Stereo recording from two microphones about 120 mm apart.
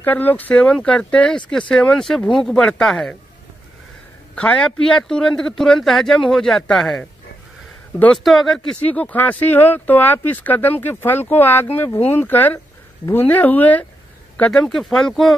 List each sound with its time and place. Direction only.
0.0 s a man's voice: 15° left (ahead or behind)
4.4 s a man's voice: 10° left (ahead or behind)
8.0 s a man's voice: 5° left (ahead or behind)
8.8 s a man's voice: 10° left (ahead or behind)